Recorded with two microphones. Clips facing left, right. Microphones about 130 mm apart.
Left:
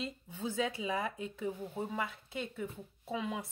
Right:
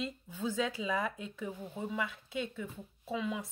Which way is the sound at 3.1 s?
50° left (ahead or behind).